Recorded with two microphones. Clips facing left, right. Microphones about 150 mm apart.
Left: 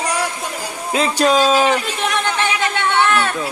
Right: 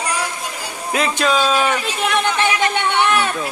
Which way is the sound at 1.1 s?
40° left (ahead or behind).